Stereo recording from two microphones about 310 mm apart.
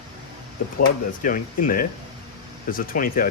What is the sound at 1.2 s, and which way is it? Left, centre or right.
Speech, left.